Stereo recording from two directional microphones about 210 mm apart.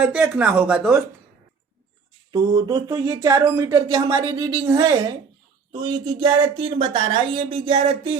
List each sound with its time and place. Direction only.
0.0 s speech: 5° right (ahead or behind)
2.3 s speech: 20° right (ahead or behind)